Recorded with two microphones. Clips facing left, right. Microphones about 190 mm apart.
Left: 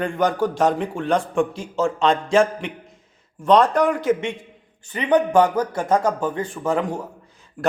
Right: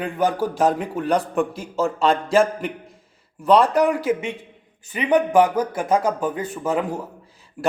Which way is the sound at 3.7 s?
10° right (ahead or behind).